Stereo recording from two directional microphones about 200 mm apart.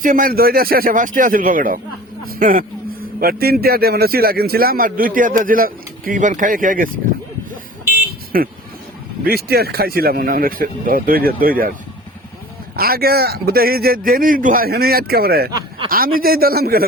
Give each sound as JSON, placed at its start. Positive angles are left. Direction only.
{"t": 0.0, "sound": "speech", "side_deg": -45}
{"t": 8.3, "sound": "speech", "side_deg": -45}
{"t": 12.7, "sound": "speech", "side_deg": -50}